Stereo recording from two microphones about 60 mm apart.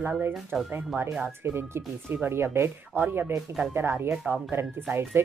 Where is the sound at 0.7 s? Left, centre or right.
Right.